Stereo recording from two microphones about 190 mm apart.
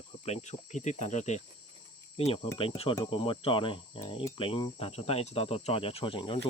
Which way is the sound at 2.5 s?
30° left (ahead or behind).